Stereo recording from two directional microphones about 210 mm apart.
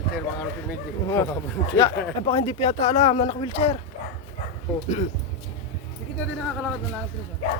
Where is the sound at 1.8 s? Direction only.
25° left (ahead or behind).